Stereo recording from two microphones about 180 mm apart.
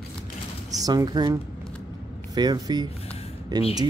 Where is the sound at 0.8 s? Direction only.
20° right (ahead or behind).